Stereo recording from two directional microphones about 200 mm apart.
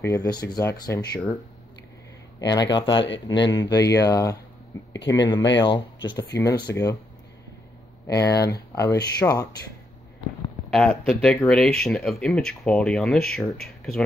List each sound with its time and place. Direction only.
0.0 s speech: 15° left (ahead or behind)
2.5 s speech: 20° left (ahead or behind)
8.1 s speech: 15° left (ahead or behind)
10.7 s speech: centre (ahead or behind)